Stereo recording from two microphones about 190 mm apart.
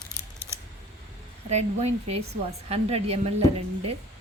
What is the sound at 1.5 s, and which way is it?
A woman's voice, 35° right (ahead or behind).